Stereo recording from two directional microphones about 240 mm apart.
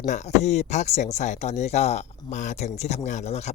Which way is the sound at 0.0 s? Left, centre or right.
Left.